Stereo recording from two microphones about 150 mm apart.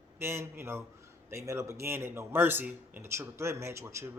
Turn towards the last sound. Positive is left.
turn(degrees=-20)  # may be behind; listen again after turning